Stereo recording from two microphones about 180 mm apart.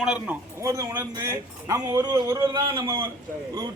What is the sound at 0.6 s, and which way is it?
A man's voice, 15° right (ahead or behind).